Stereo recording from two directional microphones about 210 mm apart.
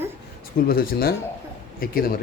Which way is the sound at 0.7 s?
45° left (ahead or behind).